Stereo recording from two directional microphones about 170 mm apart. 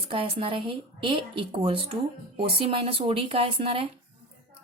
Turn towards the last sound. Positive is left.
turn(degrees=-30)  # may be behind; listen again after turning